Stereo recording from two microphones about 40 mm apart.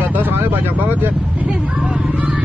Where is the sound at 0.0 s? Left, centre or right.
Right.